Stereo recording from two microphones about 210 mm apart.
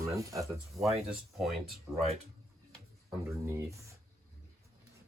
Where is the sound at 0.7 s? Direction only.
Centre (ahead or behind).